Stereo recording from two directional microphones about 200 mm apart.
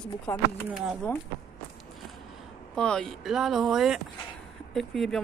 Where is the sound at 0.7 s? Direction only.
5° right (ahead or behind).